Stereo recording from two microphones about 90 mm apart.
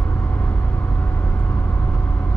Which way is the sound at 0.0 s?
20° left (ahead or behind).